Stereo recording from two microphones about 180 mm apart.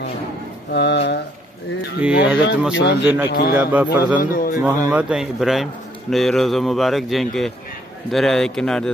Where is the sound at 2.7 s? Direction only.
75° left (ahead or behind).